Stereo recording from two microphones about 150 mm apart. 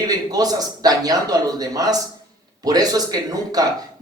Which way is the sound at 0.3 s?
25° right (ahead or behind).